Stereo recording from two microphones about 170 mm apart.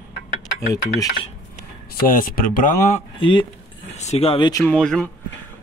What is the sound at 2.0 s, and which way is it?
Speech, 55° left (ahead or behind).